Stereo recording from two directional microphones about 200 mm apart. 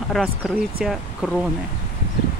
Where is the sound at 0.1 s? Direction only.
Centre (ahead or behind).